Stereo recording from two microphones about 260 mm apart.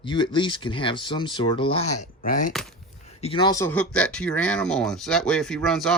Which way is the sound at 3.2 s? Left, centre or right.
Centre.